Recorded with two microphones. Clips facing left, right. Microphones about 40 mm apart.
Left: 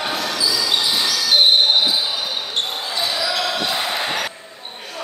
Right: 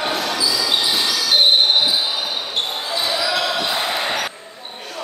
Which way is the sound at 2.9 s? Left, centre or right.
Centre.